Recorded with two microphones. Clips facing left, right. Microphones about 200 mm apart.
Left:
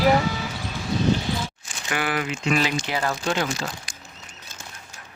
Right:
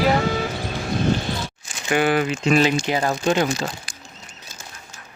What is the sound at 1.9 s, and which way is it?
Speech, 25° right (ahead or behind).